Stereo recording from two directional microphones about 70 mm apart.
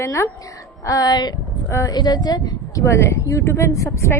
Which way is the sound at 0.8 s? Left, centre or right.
Left.